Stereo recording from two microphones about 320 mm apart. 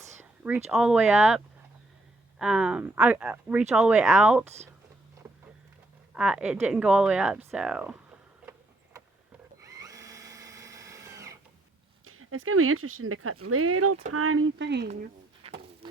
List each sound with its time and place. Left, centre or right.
0.2 s a sound: centre
0.7 s speech: centre
2.4 s speech: centre
6.1 s speech: centre
9.6 s drill: centre
12.0 s speech: right